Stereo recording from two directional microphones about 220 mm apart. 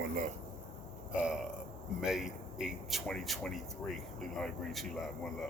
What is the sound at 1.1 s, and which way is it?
Speech, 5° right (ahead or behind).